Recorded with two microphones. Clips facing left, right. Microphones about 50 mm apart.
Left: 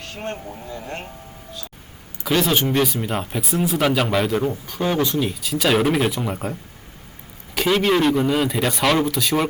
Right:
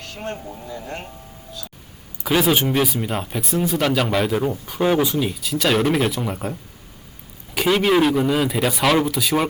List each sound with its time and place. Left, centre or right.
0.3 s speech: centre
0.7 s speech: left
2.2 s speech: centre